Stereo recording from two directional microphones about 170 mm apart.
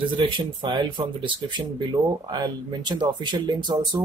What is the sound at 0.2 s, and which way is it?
Speech, 30° right (ahead or behind).